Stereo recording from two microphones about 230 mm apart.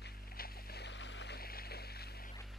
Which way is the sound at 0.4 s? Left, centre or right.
Left.